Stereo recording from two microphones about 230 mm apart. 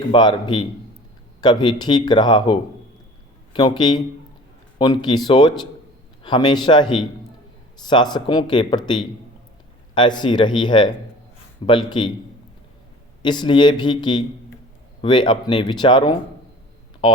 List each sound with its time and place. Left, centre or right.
0.1 s speech: centre
13.2 s speech: centre